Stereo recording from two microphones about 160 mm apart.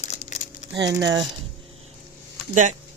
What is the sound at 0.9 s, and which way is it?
Speech, 25° right (ahead or behind).